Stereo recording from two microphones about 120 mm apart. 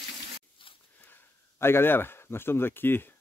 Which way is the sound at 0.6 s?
45° left (ahead or behind).